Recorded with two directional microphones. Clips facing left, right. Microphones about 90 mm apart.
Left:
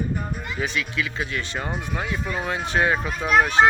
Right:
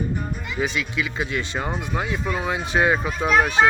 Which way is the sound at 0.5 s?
15° right (ahead or behind).